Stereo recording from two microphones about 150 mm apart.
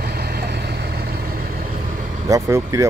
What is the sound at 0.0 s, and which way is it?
Vehicle, 90° right.